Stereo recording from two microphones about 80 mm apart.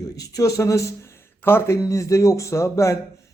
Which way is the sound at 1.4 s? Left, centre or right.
Left.